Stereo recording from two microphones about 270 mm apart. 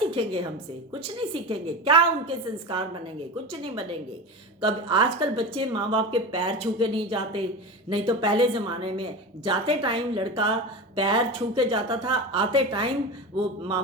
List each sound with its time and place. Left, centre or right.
0.1 s a woman's voice: centre
4.6 s a woman's voice: centre